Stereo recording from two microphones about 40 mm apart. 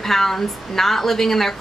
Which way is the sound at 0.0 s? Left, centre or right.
Centre.